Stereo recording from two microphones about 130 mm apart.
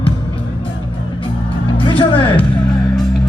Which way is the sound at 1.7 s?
45° left (ahead or behind).